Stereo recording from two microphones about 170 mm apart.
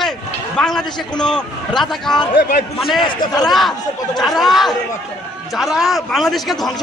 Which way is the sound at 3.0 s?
25° left (ahead or behind).